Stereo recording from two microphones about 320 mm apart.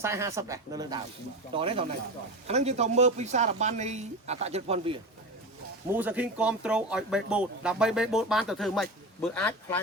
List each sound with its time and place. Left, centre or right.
0.0 s speech: centre
5.9 s speech: centre